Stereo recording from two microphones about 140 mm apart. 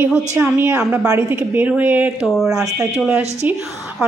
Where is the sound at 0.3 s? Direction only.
15° right (ahead or behind).